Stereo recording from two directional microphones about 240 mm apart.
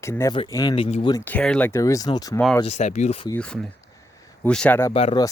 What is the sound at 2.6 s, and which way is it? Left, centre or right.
Speech, left.